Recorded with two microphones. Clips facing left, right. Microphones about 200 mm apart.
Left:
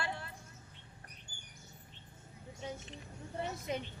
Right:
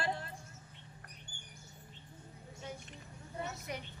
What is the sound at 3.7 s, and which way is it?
Speech, 20° left (ahead or behind).